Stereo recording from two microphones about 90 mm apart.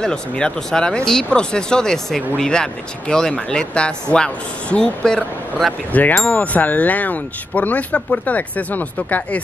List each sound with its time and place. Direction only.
0.0 s speech: 10° left (ahead or behind)